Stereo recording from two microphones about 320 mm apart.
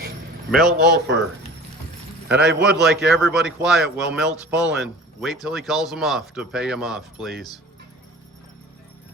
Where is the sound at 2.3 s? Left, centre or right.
Right.